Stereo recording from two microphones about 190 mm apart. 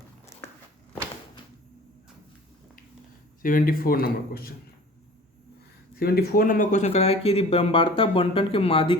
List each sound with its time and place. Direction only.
3.4 s speech: 50° left (ahead or behind)
6.0 s speech: 55° left (ahead or behind); by 9.0 s 25° left (ahead or behind)